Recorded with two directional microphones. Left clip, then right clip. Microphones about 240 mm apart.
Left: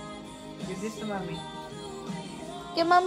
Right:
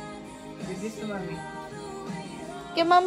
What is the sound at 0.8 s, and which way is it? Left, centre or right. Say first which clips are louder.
Speech: left 1 dB; left.